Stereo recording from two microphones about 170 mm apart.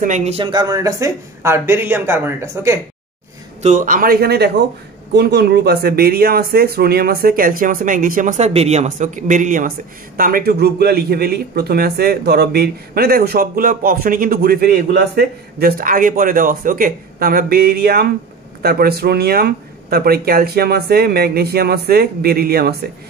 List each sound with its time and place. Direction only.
0.0 s speech: 45° right (ahead or behind); by 2.8 s 15° right (ahead or behind)
3.6 s a man's voice: 50° right (ahead or behind)